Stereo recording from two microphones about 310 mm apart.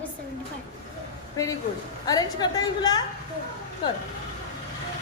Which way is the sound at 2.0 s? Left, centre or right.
Centre.